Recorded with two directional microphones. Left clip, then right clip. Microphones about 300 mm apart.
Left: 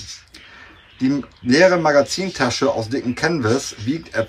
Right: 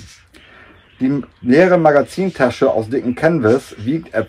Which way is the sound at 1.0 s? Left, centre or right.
Centre.